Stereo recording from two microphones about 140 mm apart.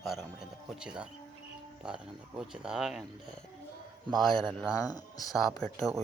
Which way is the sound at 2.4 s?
5° right (ahead or behind).